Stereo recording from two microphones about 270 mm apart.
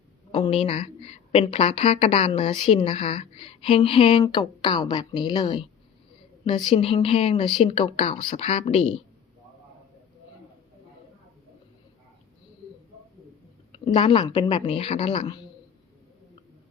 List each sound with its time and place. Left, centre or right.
0.3 s a woman's voice: left
13.7 s a woman's voice: centre